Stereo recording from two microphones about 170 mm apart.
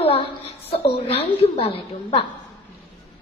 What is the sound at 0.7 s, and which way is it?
A woman's voice, 35° left (ahead or behind).